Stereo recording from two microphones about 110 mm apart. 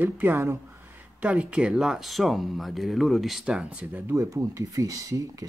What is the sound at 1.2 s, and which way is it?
Speech, 10° right (ahead or behind).